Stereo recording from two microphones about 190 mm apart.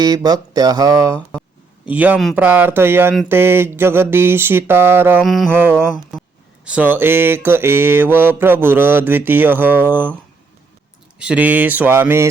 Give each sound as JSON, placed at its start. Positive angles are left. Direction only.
{"t": 0.0, "sound": "speech", "side_deg": -20}
{"t": 1.9, "sound": "mantra", "side_deg": -10}
{"t": 5.2, "sound": "a sound", "side_deg": 0}
{"t": 5.5, "sound": "mantra", "side_deg": -10}
{"t": 11.2, "sound": "mantra", "side_deg": -5}